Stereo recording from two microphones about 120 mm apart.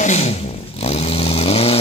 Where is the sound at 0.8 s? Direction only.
55° left (ahead or behind).